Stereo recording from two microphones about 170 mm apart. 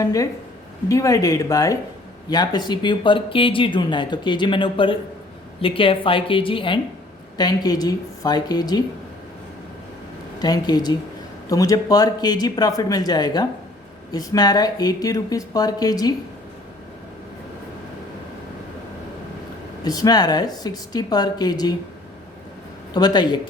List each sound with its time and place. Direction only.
0.0 s a woman's voice: 20° left (ahead or behind)
10.4 s speech: 25° left (ahead or behind)
19.8 s speech: 25° left (ahead or behind)
23.0 s speech: 25° left (ahead or behind)